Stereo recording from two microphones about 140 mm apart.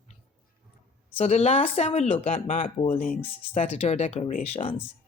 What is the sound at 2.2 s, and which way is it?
Speech, 65° left (ahead or behind).